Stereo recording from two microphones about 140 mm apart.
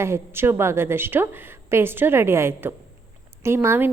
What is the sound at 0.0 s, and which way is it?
A woman's voice, 15° right (ahead or behind).